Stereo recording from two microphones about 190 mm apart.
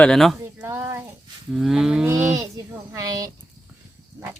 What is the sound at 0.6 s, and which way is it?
Speech, 10° right (ahead or behind).